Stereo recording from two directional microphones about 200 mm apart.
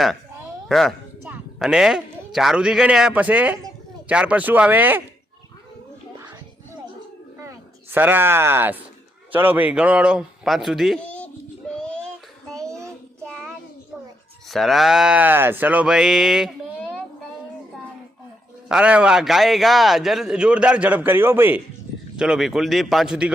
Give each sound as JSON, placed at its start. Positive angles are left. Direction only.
{"t": 0.7, "sound": "a man's voice", "side_deg": 0}
{"t": 7.3, "sound": "a sound", "side_deg": -10}
{"t": 9.3, "sound": "a man's voice", "side_deg": -10}
{"t": 11.7, "sound": "child singing", "side_deg": 5}
{"t": 12.6, "sound": "child singing", "side_deg": -15}
{"t": 13.2, "sound": "child singing", "side_deg": 0}
{"t": 14.4, "sound": "a man's voice", "side_deg": 0}
{"t": 18.7, "sound": "a man's voice", "side_deg": -5}